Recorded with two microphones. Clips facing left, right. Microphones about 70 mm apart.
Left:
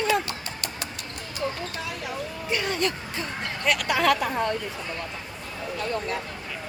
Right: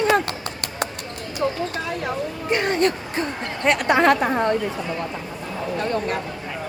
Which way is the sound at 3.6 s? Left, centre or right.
Right.